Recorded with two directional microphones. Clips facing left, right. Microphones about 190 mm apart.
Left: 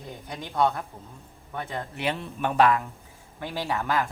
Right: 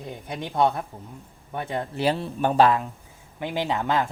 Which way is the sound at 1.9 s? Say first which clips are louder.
Right 7 dB; 35° right (ahead or behind).